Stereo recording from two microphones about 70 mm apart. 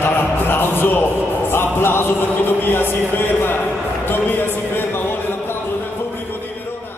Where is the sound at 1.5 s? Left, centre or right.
Left.